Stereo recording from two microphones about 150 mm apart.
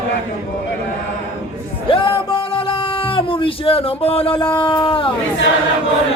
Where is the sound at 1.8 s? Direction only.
35° left (ahead or behind).